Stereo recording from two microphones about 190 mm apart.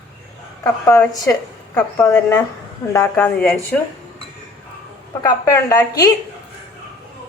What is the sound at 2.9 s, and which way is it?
Speech, 15° left (ahead or behind).